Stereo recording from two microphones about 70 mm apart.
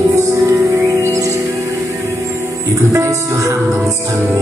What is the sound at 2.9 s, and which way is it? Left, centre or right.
Music, right.